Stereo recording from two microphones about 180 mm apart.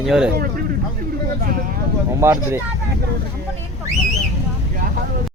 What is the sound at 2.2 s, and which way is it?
Speech, 15° right (ahead or behind).